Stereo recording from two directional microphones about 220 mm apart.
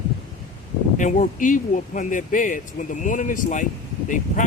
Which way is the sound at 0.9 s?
35° left (ahead or behind).